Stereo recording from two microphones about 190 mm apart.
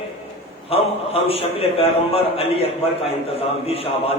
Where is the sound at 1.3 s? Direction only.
30° left (ahead or behind).